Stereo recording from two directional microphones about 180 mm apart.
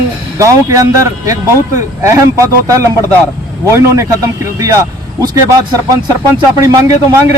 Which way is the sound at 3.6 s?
15° right (ahead or behind).